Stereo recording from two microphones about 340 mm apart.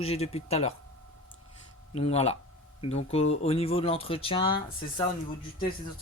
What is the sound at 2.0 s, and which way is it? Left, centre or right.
Speech, centre.